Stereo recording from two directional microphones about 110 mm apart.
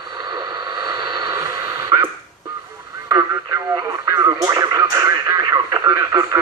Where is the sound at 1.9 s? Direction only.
35° right (ahead or behind).